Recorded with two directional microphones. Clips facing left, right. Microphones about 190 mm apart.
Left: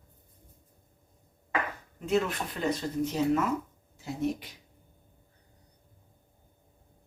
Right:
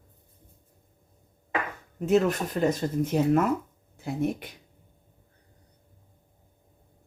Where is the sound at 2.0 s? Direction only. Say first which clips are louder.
Right 6 dB; 45° right (ahead or behind).